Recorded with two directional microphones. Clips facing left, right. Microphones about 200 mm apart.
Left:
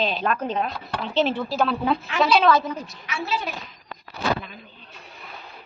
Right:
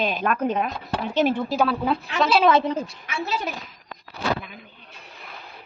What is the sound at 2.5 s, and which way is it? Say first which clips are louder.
Speech: right 1 dB; 25° right (ahead or behind).